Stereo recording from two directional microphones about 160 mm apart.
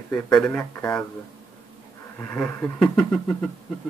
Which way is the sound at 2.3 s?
5° left (ahead or behind).